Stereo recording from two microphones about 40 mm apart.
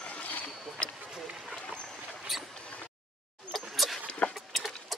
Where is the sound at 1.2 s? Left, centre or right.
Centre.